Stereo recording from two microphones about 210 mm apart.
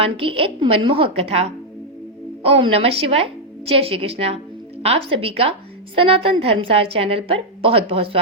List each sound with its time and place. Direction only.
0.0 s a woman's voice: 25° right (ahead or behind)